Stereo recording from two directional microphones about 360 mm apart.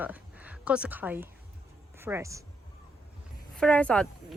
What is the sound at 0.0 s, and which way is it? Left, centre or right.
A woman's voice, centre.